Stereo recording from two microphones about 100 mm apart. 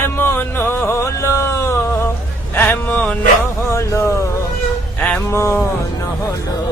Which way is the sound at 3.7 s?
30° left (ahead or behind).